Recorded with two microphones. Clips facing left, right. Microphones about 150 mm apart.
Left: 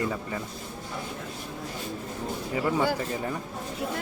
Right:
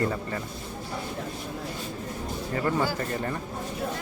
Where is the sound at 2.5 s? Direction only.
5° left (ahead or behind).